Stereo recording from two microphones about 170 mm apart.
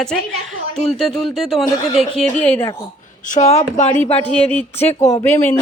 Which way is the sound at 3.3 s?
40° left (ahead or behind).